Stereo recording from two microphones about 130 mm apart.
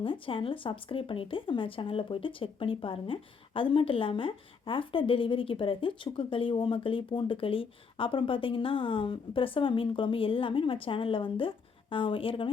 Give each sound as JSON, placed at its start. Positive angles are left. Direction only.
{"t": 0.0, "sound": "speech", "side_deg": 40}